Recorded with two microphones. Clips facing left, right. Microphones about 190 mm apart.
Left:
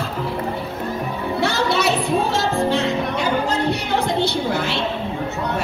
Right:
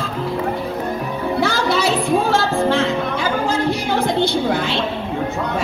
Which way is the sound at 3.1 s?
65° left (ahead or behind).